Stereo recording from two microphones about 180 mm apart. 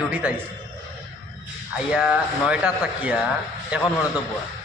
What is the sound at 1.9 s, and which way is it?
A man's voice, 5° right (ahead or behind).